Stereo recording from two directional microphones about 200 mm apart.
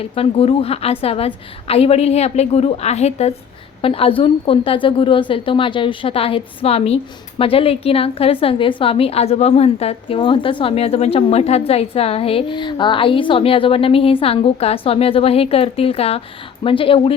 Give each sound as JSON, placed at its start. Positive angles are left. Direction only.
{"t": 0.0, "sound": "a woman's voice", "side_deg": 30}